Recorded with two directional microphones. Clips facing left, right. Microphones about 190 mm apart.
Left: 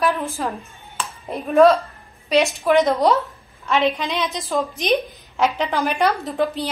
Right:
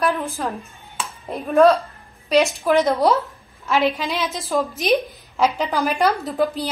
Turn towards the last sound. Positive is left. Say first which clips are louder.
# right 1 dB
turn(degrees=0)  # may be behind; listen again after turning